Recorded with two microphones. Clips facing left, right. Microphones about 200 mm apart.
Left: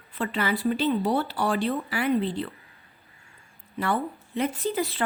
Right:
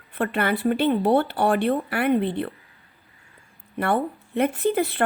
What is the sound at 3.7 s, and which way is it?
Speech, 60° right (ahead or behind).